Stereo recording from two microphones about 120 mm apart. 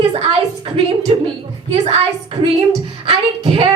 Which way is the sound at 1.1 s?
50° right (ahead or behind).